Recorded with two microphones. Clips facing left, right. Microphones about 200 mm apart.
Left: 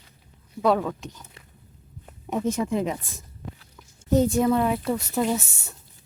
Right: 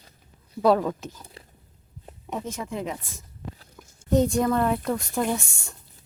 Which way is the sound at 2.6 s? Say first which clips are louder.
Left 6 dB; 20° left (ahead or behind).